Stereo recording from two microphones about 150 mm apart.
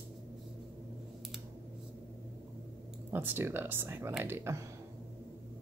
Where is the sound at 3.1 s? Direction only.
15° right (ahead or behind).